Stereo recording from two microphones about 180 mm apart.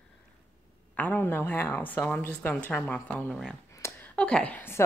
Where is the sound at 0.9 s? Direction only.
10° left (ahead or behind).